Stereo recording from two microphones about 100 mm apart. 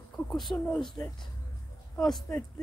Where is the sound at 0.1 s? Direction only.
5° left (ahead or behind).